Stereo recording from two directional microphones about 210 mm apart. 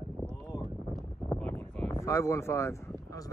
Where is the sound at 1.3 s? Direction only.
5° left (ahead or behind).